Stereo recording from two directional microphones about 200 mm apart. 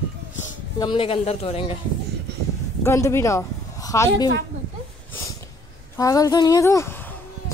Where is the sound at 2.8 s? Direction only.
15° left (ahead or behind).